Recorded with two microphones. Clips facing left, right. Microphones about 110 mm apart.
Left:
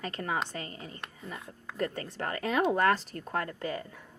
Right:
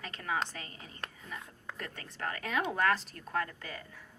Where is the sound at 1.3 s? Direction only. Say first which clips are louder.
Left 1 dB; centre (ahead or behind).